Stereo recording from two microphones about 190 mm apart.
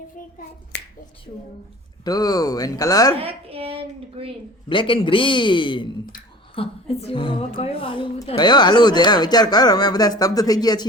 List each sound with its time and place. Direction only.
2.0 s a woman's voice: 20° left (ahead or behind)
3.2 s speech: 30° right (ahead or behind)
4.7 s a woman's voice: 25° left (ahead or behind)